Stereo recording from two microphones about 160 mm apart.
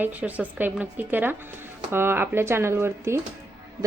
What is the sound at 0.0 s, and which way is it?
Speech, 10° right (ahead or behind).